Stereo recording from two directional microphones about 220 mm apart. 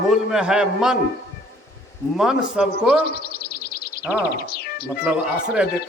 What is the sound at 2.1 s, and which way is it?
Music, centre (ahead or behind).